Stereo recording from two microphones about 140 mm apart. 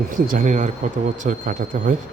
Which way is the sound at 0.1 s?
75° right (ahead or behind).